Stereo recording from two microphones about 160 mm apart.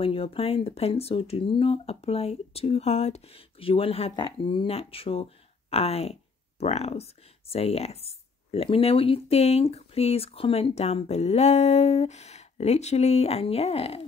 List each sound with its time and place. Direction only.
0.0 s speech: 35° left (ahead or behind)